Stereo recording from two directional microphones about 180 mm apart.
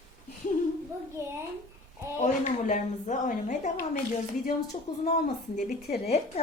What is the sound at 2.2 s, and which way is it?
A woman's voice, 40° left (ahead or behind).